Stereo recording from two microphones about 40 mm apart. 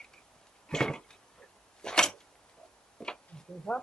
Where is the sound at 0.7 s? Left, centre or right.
Centre.